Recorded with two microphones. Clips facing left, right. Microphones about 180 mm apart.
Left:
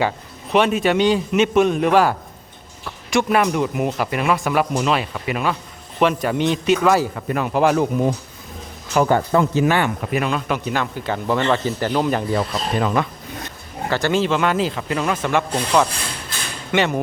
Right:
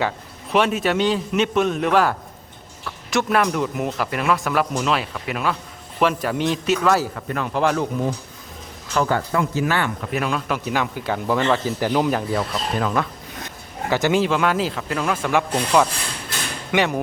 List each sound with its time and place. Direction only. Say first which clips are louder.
0.5 s speech: left 2 dB; centre (ahead or behind)
7.2 s speech: left 3 dB; 10° left (ahead or behind)
10.1 s speech: left 2 dB; centre (ahead or behind)
13.9 s speech: even; 10° right (ahead or behind)